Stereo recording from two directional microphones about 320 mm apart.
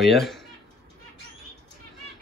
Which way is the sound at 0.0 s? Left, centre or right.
Centre.